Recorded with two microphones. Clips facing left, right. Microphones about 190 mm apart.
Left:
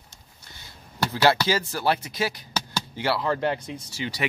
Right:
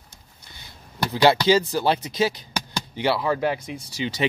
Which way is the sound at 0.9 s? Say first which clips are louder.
Right 3 dB; 15° right (ahead or behind).